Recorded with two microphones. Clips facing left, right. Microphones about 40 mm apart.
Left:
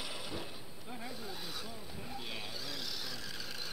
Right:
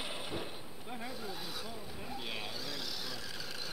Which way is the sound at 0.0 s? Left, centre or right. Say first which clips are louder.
Right 2 dB; right.